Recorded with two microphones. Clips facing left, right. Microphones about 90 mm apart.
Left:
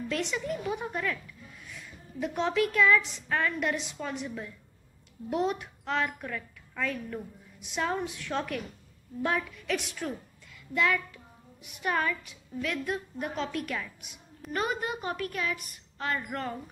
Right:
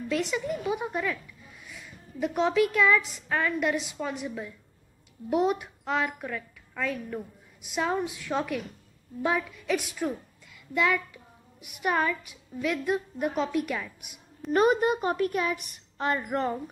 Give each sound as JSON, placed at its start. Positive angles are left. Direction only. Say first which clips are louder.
{"t": 0.1, "sound": "a woman's voice", "louder": "right 4 dB", "side_deg": -5}
{"t": 14.5, "sound": "a woman's voice", "louder": "right 9 dB", "side_deg": -25}